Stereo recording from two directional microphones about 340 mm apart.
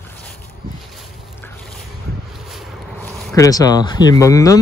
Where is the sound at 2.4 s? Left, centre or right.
Centre.